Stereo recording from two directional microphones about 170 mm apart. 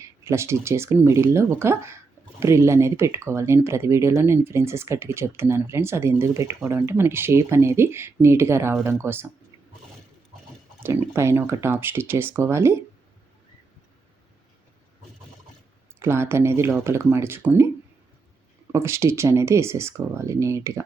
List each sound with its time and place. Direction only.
0.0 s speech: 15° right (ahead or behind)
10.8 s speech: 15° right (ahead or behind)
16.0 s speech: 15° right (ahead or behind)
18.7 s speech: 15° right (ahead or behind)